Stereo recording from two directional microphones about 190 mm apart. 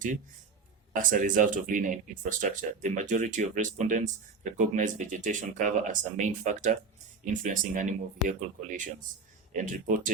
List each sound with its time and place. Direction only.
0.9 s speech: 45° right (ahead or behind)